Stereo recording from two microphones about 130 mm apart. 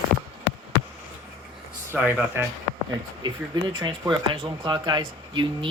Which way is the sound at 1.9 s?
15° right (ahead or behind).